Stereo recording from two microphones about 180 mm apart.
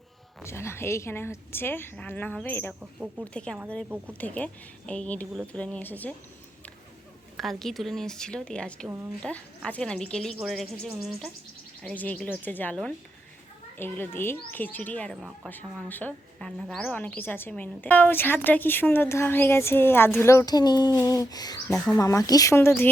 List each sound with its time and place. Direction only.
0.4 s speech: 15° left (ahead or behind)
7.3 s speech: centre (ahead or behind)